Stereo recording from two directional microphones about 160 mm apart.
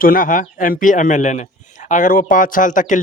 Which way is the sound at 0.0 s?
60° left (ahead or behind).